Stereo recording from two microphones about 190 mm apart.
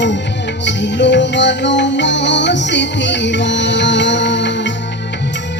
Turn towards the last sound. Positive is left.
turn(degrees=70)  # may be behind; listen again after turning